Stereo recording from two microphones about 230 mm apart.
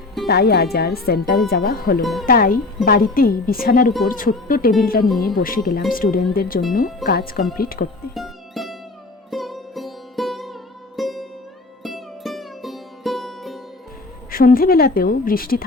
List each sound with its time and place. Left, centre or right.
0.3 s speech: left
2.0 s speech: centre
2.2 s a woman's voice: left
8.1 s music: centre
14.3 s a woman's voice: left